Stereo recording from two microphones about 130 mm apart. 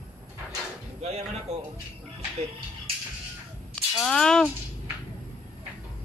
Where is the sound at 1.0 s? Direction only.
55° right (ahead or behind).